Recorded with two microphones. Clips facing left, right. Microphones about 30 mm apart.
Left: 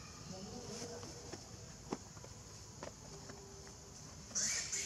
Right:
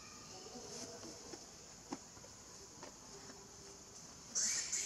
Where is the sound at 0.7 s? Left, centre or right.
Centre.